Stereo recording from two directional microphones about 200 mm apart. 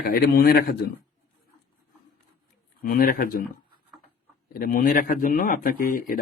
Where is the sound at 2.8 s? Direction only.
50° left (ahead or behind).